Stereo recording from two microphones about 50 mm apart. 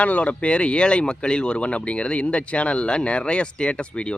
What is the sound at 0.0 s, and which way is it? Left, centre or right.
Speech, left.